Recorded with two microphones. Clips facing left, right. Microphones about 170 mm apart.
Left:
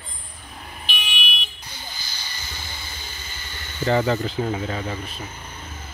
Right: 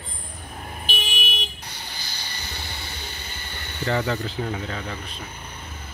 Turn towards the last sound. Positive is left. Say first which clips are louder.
# left 3 dB
turn(degrees=5)  # may be behind; listen again after turning